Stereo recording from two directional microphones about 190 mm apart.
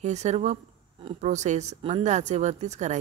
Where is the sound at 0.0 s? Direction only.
35° right (ahead or behind).